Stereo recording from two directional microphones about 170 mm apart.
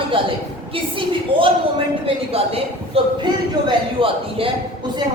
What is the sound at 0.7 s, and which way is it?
A woman's voice, 30° right (ahead or behind).